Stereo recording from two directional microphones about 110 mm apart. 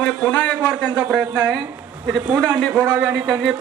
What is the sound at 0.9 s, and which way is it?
Speech, 10° right (ahead or behind).